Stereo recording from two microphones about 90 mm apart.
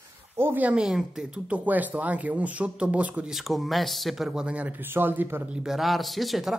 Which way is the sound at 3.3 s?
Centre (ahead or behind).